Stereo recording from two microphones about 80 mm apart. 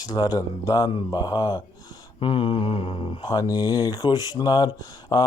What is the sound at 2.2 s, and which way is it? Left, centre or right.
Mantra, left.